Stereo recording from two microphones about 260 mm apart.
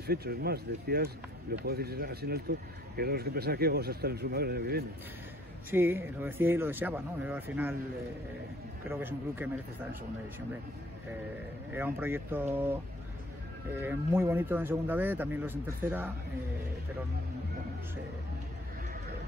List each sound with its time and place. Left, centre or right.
0.0 s speech: right
5.7 s speech: centre
8.8 s speech: centre
11.7 s speech: centre
13.7 s speech: centre